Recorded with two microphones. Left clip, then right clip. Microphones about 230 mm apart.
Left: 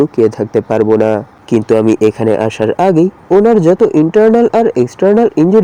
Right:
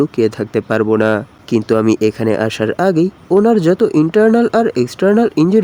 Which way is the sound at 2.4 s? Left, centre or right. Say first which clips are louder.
Left 4 dB; centre.